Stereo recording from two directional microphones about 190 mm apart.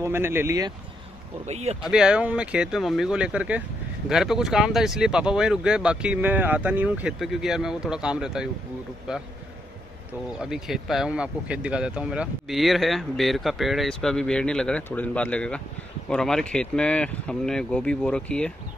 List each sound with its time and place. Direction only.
0.0 s speech: 10° right (ahead or behind)
1.4 s speech: 35° right (ahead or behind)
1.8 s speech: 5° right (ahead or behind)
10.4 s speech: centre (ahead or behind)